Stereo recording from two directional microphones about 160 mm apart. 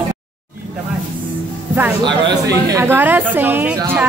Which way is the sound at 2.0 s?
30° right (ahead or behind).